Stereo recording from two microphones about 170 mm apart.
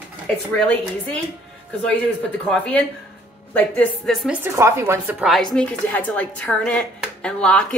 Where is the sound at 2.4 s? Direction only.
5° left (ahead or behind).